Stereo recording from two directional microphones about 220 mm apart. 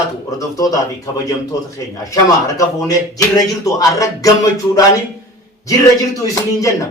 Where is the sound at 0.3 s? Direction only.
15° left (ahead or behind).